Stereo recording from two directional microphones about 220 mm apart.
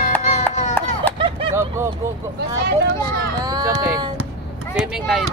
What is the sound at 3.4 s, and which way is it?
Speech, 15° right (ahead or behind).